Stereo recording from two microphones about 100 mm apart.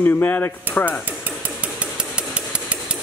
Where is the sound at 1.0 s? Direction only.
15° right (ahead or behind).